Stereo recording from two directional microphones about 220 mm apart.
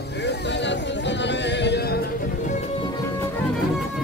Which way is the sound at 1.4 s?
50° left (ahead or behind).